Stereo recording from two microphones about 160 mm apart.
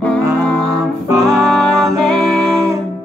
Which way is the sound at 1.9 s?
5° left (ahead or behind).